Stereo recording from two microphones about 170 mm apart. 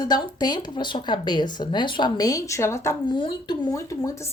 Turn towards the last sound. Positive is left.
turn(degrees=20)  # may be behind; listen again after turning